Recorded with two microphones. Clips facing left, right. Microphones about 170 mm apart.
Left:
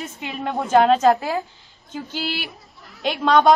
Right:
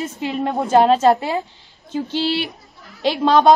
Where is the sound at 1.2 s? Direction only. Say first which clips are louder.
Right 2 dB; 20° right (ahead or behind).